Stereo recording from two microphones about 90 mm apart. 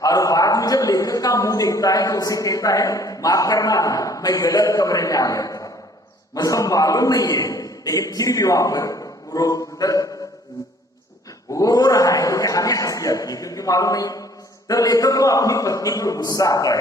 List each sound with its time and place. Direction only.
0.0 s a man's voice: 40° left (ahead or behind)
11.5 s a man's voice: 40° left (ahead or behind)